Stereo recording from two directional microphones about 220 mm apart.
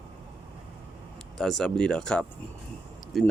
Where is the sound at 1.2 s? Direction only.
Centre (ahead or behind).